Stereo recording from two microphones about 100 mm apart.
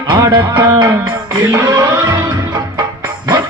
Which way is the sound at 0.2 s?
45° right (ahead or behind).